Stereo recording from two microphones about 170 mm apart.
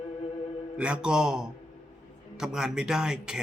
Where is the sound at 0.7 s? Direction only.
5° right (ahead or behind).